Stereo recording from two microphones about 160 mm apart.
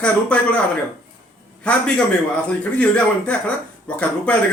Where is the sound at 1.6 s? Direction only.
5° left (ahead or behind).